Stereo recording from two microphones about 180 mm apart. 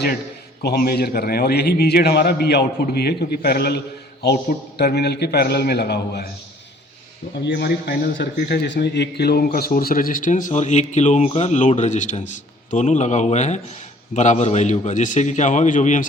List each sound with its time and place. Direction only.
0.6 s a man's voice: 60° left (ahead or behind)
7.3 s a man's voice: 65° left (ahead or behind); by 16.0 s 45° left (ahead or behind)